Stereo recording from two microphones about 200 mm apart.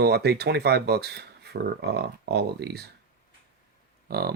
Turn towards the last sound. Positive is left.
turn(degrees=-50)  # may be behind; listen again after turning